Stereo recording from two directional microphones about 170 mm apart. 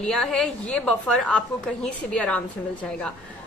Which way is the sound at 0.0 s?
5° left (ahead or behind).